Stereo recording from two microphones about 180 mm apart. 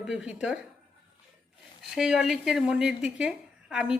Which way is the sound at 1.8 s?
5° right (ahead or behind).